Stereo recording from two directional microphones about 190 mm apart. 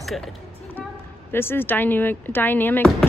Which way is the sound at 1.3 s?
10° left (ahead or behind).